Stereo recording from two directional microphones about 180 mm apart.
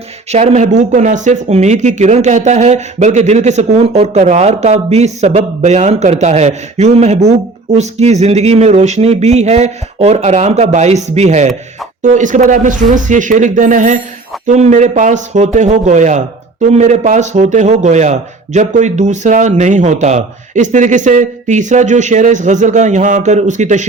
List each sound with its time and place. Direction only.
0.3 s speech: 40° right (ahead or behind)